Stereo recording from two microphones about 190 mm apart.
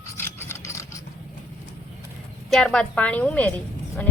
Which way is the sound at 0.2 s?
15° left (ahead or behind).